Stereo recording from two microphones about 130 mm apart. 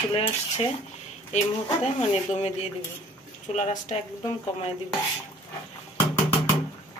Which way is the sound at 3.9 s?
55° left (ahead or behind).